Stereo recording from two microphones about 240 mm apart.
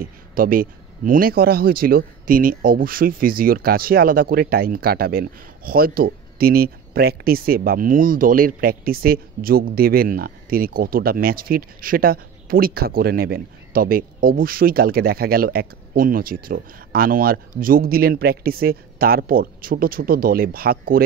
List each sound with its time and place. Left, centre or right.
0.0 s speech: right